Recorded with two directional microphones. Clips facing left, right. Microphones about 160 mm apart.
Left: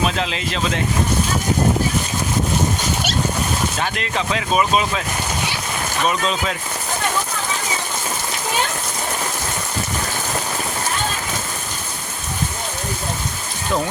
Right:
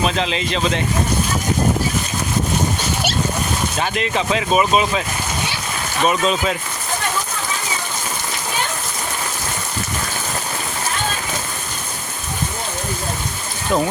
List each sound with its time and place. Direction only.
0.0 s speech: centre (ahead or behind)
3.8 s speech: 5° right (ahead or behind)
6.1 s speech: 5° right (ahead or behind)